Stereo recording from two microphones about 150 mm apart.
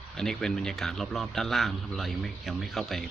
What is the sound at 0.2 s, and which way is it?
A man's voice, 5° left (ahead or behind).